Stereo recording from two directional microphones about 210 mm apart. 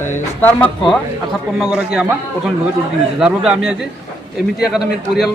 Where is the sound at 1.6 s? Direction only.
5° right (ahead or behind).